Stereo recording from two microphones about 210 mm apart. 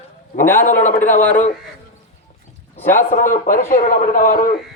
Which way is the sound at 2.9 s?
40° left (ahead or behind).